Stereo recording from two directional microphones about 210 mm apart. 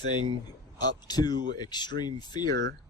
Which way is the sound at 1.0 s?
20° left (ahead or behind).